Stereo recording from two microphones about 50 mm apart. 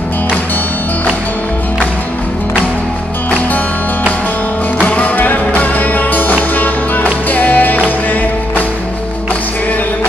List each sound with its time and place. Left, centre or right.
3.3 s music: left